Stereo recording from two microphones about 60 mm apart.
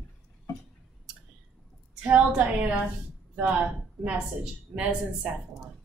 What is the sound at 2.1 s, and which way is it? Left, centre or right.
A woman's voice, right.